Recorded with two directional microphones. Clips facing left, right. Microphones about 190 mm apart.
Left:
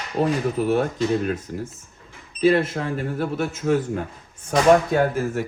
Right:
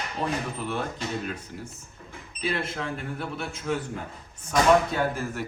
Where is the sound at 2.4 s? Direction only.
45° left (ahead or behind).